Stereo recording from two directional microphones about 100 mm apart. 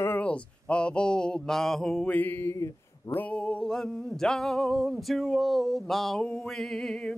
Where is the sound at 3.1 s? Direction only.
15° left (ahead or behind).